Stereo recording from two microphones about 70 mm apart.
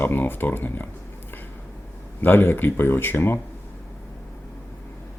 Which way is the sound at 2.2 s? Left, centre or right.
Left.